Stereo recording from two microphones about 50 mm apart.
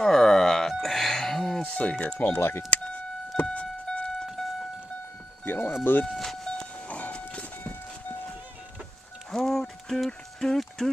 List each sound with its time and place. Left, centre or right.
0.0 s music: centre
1.6 s music: left
2.1 s speech: left
3.8 s vehicle: centre
4.3 s vehicle: centre
5.4 s speech: left
6.0 s speech: centre
6.4 s train: centre
6.9 s vehicle: left
9.3 s a sound: centre